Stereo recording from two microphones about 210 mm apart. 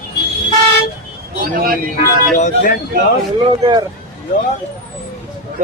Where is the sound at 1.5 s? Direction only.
45° right (ahead or behind).